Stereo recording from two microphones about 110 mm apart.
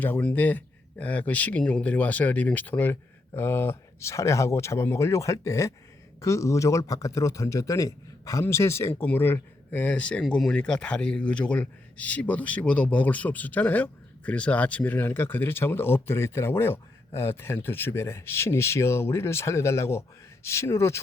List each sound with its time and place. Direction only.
0.0 s a man's voice: 15° left (ahead or behind)